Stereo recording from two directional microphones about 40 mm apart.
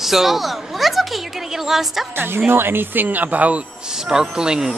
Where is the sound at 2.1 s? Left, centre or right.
Right.